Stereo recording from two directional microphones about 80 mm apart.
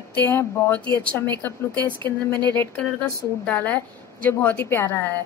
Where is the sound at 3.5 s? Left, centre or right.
Left.